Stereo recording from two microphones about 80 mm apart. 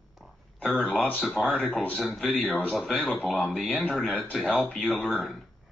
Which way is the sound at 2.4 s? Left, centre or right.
Centre.